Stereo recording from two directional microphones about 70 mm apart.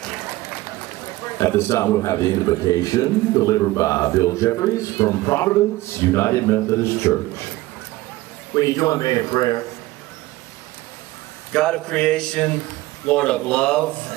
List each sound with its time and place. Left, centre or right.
1.4 s a man's voice: left
8.5 s speech: left
11.5 s a sound: centre